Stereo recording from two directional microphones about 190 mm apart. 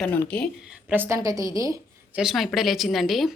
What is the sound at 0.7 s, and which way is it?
A woman's voice, 10° right (ahead or behind).